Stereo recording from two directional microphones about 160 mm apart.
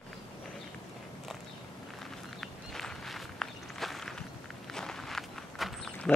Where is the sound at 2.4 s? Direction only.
Centre (ahead or behind).